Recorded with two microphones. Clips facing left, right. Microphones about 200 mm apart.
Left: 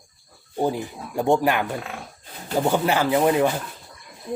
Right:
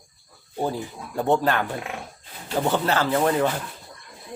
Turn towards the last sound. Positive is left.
turn(degrees=10)  # may be behind; listen again after turning